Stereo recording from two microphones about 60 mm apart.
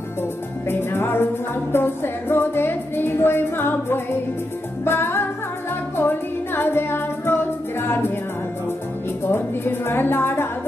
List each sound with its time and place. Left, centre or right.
0.7 s music: left
9.2 s music: left